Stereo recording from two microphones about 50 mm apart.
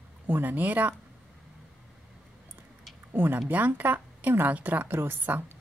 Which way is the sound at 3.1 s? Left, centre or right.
Right.